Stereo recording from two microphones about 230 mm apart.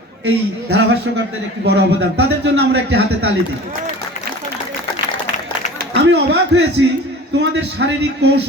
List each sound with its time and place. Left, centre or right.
0.3 s speech: right
5.9 s speech: right